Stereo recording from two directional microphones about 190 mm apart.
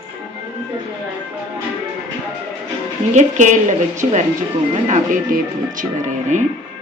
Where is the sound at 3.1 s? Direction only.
40° right (ahead or behind).